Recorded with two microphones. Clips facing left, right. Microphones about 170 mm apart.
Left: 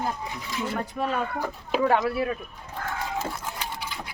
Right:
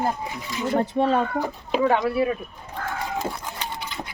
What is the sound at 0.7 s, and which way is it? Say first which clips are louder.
Speech: right 9 dB; 30° right (ahead or behind).